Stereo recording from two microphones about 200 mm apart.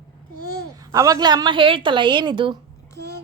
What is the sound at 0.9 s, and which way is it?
A woman's voice, 15° right (ahead or behind).